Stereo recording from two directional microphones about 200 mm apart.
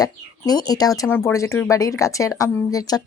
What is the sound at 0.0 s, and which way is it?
Speech, 20° left (ahead or behind).